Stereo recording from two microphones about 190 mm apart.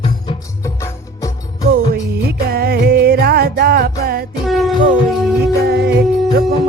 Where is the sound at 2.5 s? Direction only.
55° right (ahead or behind).